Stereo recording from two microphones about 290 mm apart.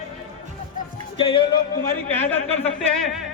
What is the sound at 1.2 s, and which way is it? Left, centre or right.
Speech, centre.